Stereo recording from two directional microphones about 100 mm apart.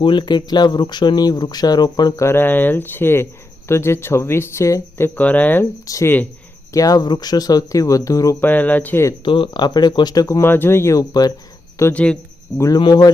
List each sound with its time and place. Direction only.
0.0 s speech: 55° left (ahead or behind)
2.2 s speech: 20° left (ahead or behind)
5.8 s speech: 35° left (ahead or behind)
8.4 s speech: 20° left (ahead or behind)
9.2 s speech: 55° left (ahead or behind); by 10.4 s 35° left (ahead or behind)
10.4 s speech: 20° left (ahead or behind)
11.1 s speech: 40° left (ahead or behind)